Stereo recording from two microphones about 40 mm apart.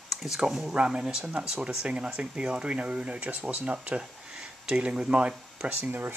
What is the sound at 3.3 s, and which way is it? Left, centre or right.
Speech, right.